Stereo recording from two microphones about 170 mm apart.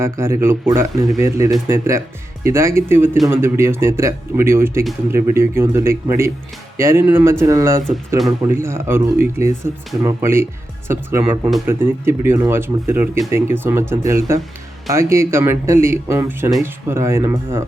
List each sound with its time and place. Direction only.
0.0 s speech: 15° right (ahead or behind)